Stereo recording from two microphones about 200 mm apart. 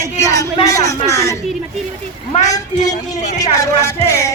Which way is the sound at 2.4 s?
15° left (ahead or behind).